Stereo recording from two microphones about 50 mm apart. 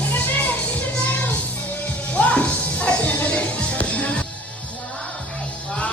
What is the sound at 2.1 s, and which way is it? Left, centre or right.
Music, left.